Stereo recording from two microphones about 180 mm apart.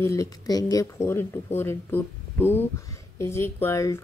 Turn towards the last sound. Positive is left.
turn(degrees=15)  # may be behind; listen again after turning